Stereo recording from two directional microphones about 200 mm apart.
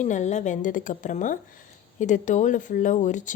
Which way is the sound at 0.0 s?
35° left (ahead or behind).